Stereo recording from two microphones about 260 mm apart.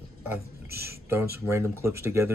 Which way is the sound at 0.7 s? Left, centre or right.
Right.